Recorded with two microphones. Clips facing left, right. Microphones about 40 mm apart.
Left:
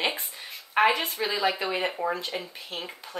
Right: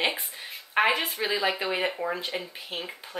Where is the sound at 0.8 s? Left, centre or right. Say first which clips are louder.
Left 1 dB; centre.